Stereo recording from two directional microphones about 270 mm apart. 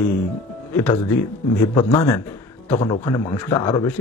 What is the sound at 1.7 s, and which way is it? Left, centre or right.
A man's voice, centre.